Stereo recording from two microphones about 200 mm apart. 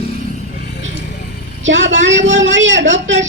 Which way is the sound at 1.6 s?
65° right (ahead or behind).